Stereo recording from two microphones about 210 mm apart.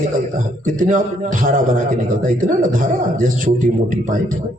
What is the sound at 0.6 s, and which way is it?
A man's voice, 35° right (ahead or behind).